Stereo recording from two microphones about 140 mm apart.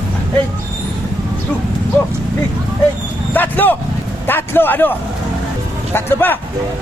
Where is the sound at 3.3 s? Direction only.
15° left (ahead or behind).